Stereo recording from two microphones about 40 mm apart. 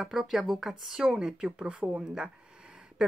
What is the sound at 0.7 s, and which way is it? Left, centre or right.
A woman's voice, centre.